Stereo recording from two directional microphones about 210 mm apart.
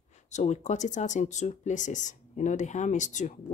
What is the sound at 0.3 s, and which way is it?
Speech, 35° left (ahead or behind).